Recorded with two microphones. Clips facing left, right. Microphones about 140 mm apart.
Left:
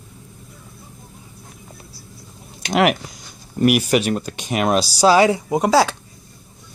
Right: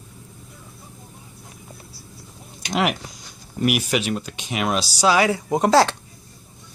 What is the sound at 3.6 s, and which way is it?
Speech, 45° left (ahead or behind).